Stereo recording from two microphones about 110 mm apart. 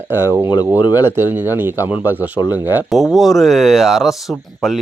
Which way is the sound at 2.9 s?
Centre (ahead or behind).